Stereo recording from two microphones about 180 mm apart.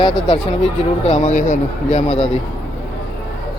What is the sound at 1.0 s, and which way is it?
Speech, 40° left (ahead or behind).